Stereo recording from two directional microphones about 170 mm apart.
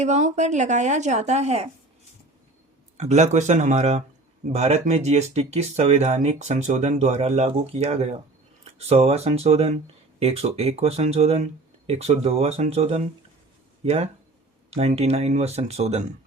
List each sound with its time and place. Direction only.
0.0 s a woman's voice: 45° right (ahead or behind)
3.0 s a woman's voice: 40° right (ahead or behind)